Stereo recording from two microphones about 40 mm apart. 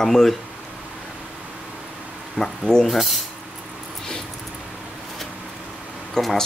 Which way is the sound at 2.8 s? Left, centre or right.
Centre.